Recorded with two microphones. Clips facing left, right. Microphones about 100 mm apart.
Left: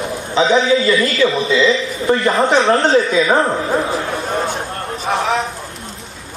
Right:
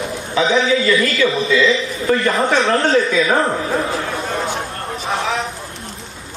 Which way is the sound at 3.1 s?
20° left (ahead or behind).